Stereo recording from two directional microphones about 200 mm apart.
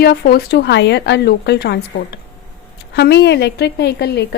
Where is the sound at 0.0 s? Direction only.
50° left (ahead or behind).